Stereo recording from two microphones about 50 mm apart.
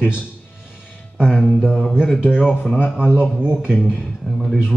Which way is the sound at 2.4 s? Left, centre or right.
Centre.